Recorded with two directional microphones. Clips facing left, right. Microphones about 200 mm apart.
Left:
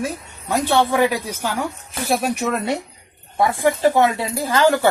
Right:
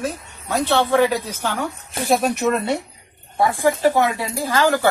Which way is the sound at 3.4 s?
20° left (ahead or behind).